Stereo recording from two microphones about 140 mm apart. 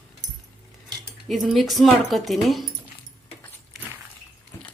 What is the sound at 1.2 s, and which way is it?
Speech, centre (ahead or behind).